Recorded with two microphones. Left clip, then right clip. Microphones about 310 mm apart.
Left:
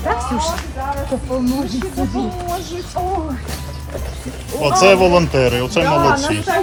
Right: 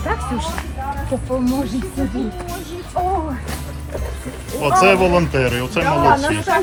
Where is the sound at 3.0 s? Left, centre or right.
Centre.